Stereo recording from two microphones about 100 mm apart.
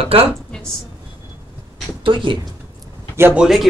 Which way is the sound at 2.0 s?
55° right (ahead or behind).